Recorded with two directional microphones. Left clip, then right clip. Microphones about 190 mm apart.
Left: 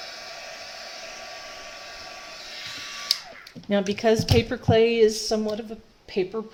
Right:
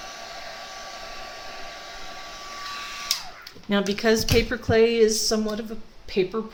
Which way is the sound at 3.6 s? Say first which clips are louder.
Even; 25° left (ahead or behind).